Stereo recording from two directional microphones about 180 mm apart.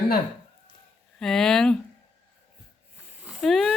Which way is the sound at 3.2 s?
5° right (ahead or behind).